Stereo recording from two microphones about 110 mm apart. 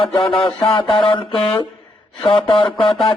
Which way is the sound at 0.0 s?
55° left (ahead or behind).